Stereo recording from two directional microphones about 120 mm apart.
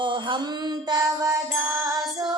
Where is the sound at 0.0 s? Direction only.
45° right (ahead or behind).